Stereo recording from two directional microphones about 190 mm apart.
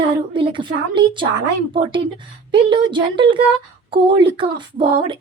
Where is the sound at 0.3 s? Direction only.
25° right (ahead or behind).